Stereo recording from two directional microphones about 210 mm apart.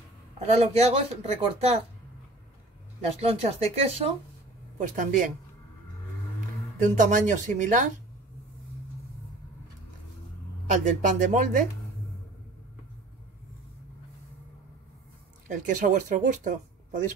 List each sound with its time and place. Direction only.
0.4 s speech: 30° right (ahead or behind)
3.2 s speech: 30° right (ahead or behind)
6.8 s speech: 40° right (ahead or behind)
10.7 s speech: 35° right (ahead or behind)
15.4 s speech: 40° right (ahead or behind)